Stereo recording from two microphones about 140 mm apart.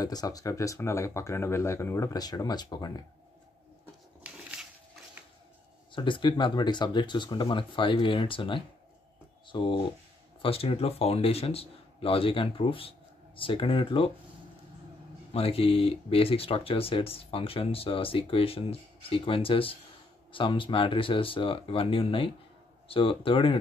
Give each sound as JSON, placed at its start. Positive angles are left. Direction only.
{"t": 0.0, "sound": "speech", "side_deg": 25}
{"t": 4.2, "sound": "a sound", "side_deg": -10}
{"t": 5.9, "sound": "speech", "side_deg": 35}
{"t": 15.3, "sound": "speech", "side_deg": 45}